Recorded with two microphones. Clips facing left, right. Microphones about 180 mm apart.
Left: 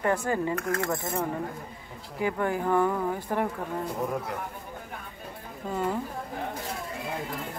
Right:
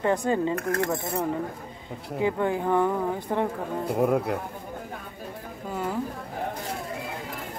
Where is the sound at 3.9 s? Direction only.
60° right (ahead or behind).